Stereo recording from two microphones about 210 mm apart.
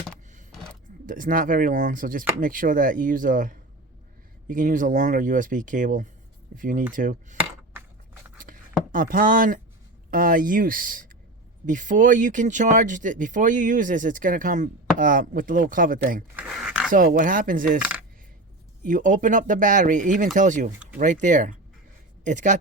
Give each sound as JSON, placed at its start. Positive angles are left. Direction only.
{"t": 1.0, "sound": "speech", "side_deg": -40}
{"t": 8.9, "sound": "speech", "side_deg": -40}
{"t": 16.3, "sound": "a sound", "side_deg": -5}
{"t": 16.9, "sound": "speech", "side_deg": -40}
{"t": 18.8, "sound": "speech", "side_deg": -40}